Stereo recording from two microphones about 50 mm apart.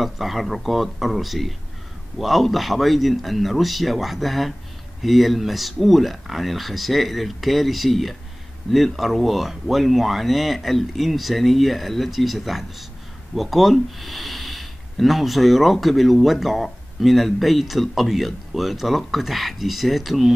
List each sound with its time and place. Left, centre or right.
0.0 s speech: centre